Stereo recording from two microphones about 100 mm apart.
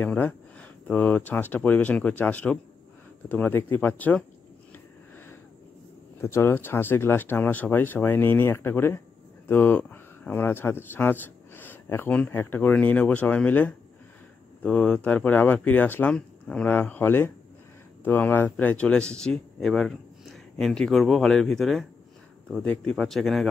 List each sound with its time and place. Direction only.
0.0 s speech: 15° left (ahead or behind)
6.2 s speech: 25° left (ahead or behind); by 23.4 s 5° left (ahead or behind)